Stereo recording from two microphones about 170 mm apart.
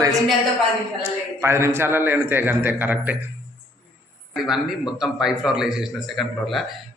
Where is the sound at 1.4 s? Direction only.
15° right (ahead or behind).